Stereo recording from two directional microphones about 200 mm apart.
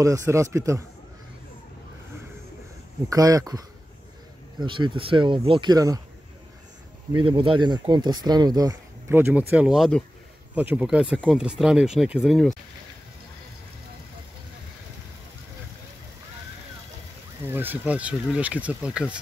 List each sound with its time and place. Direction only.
0.0 s speech: 15° right (ahead or behind)
3.1 s speech: 15° right (ahead or behind)
4.6 s speech: 25° right (ahead or behind)
7.1 s speech: 25° right (ahead or behind); by 12.5 s centre (ahead or behind)
17.5 s speech: 10° right (ahead or behind)